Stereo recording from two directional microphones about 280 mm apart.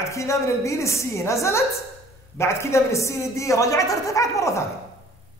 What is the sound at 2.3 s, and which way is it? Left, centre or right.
A woman's voice, centre.